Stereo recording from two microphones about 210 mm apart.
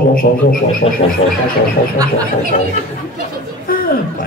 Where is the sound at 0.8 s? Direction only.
30° left (ahead or behind).